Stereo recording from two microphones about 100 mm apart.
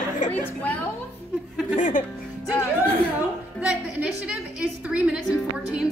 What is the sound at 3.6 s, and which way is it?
A woman's voice, 10° right (ahead or behind).